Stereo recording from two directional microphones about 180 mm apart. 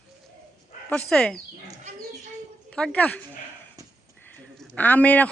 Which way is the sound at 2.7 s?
5° left (ahead or behind).